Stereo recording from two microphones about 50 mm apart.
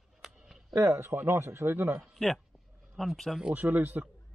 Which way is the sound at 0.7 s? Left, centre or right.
Right.